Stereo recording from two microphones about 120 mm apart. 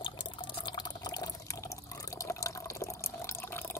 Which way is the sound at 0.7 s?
35° left (ahead or behind).